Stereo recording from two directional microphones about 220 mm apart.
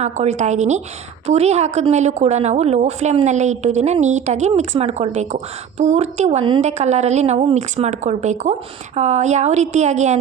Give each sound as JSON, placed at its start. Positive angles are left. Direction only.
{"t": 0.0, "sound": "a woman's voice", "side_deg": -30}